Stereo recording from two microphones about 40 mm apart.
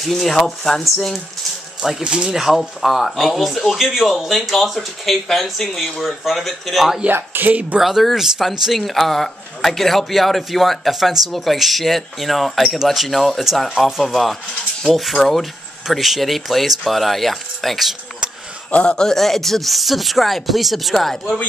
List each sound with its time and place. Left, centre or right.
0.2 s a man's voice: centre
1.8 s speech: centre
2.0 s speech: right
2.3 s a man's voice: centre
7.1 s speech: right
7.4 s speech: right
7.8 s a man's voice: centre
18.7 s a man's voice: left
19.0 s a man's voice: centre